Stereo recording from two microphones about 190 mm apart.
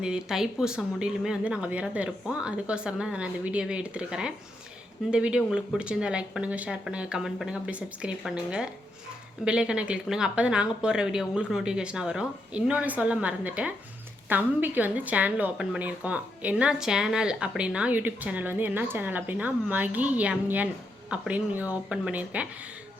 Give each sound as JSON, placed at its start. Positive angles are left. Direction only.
{"t": 0.0, "sound": "a woman's voice", "side_deg": -5}